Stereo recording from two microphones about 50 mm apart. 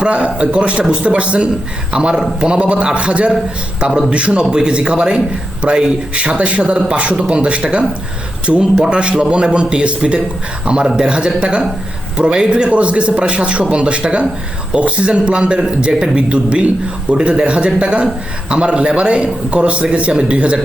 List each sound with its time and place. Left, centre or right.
0.0 s a man's voice: centre
8.5 s speech: centre
8.8 s a man's voice: right